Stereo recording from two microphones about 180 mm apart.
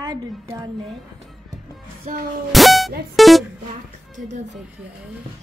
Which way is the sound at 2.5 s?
Centre (ahead or behind).